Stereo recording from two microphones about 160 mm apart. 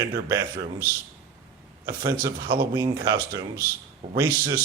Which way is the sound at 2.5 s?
35° right (ahead or behind).